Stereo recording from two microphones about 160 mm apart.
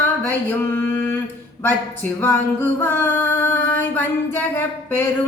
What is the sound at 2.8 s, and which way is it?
Singing, 15° left (ahead or behind).